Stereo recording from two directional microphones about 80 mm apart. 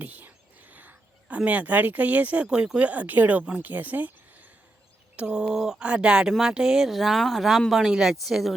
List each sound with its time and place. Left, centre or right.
0.0 s whispering: right
1.4 s speech: centre
5.1 s speech: centre